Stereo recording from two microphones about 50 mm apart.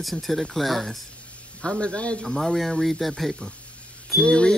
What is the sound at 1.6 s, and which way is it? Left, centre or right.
Speech, centre.